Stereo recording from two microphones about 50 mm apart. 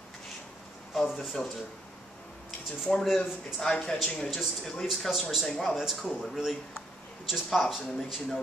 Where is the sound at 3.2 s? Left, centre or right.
Centre.